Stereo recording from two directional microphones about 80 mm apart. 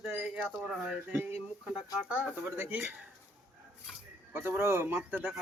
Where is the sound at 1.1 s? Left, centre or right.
Right.